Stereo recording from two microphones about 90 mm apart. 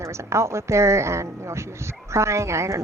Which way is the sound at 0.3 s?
30° right (ahead or behind).